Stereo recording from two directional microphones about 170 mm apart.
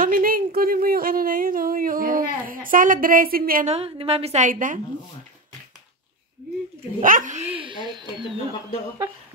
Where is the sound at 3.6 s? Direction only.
35° right (ahead or behind); by 4.8 s 50° right (ahead or behind).